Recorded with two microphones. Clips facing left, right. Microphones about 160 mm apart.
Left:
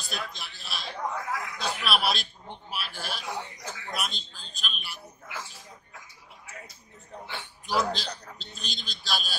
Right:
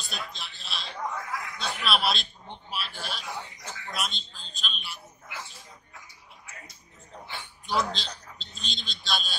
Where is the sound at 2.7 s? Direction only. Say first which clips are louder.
Even; centre (ahead or behind).